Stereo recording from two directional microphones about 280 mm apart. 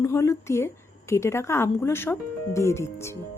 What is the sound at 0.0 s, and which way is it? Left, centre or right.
A woman's voice, centre.